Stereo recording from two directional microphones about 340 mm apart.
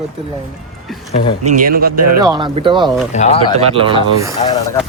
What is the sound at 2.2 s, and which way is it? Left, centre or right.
Speech, centre.